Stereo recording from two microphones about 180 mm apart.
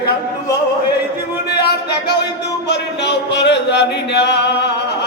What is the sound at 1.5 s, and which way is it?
Music, 65° left (ahead or behind).